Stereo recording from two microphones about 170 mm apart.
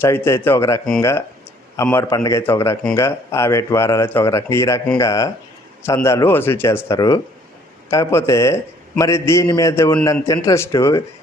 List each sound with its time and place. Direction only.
0.0 s a man's voice: 15° left (ahead or behind)